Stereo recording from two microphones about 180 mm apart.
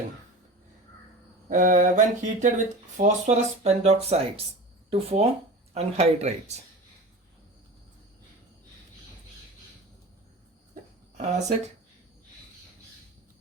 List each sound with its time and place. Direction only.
1.5 s mantra: 45° right (ahead or behind)
3.0 s speech: 40° right (ahead or behind)
11.2 s speech: 40° right (ahead or behind)